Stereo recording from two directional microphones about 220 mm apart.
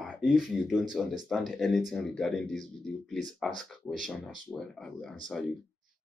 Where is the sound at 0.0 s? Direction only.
Centre (ahead or behind).